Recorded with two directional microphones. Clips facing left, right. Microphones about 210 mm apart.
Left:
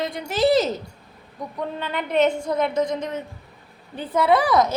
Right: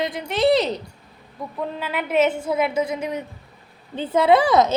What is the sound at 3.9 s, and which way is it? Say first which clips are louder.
Speech: right 3 dB; 25° right (ahead or behind).